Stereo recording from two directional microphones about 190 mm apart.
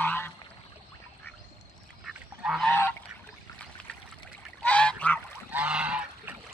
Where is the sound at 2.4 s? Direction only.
Centre (ahead or behind).